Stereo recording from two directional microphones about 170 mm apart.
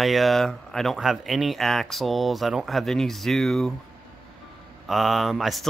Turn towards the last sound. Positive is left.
turn(degrees=0)  # may be behind; listen again after turning